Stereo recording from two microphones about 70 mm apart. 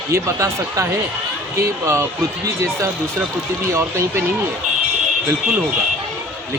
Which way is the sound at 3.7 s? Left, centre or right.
Right.